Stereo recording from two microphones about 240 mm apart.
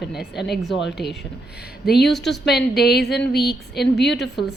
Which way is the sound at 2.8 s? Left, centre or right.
Left.